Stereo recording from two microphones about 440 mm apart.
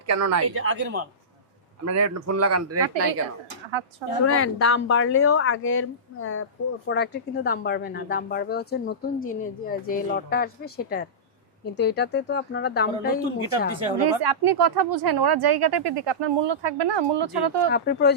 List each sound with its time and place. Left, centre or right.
0.1 s a man's voice: right
1.8 s a man's voice: right
4.3 s speech: left
14.2 s speech: right
17.7 s speech: left